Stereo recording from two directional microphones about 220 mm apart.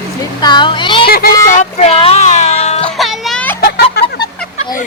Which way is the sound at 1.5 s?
35° left (ahead or behind).